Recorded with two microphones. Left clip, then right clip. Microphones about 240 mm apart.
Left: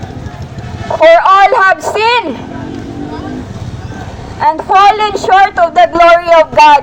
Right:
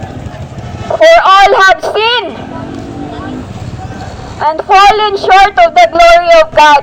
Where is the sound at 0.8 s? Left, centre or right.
Right.